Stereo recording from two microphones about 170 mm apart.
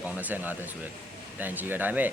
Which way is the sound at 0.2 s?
10° right (ahead or behind).